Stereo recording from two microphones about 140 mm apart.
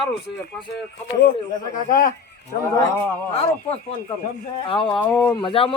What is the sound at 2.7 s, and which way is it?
Speech, 20° left (ahead or behind).